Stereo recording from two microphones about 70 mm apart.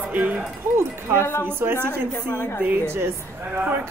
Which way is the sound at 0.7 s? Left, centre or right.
Right.